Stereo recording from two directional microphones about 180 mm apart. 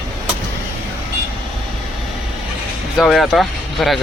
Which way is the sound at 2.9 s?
Centre (ahead or behind).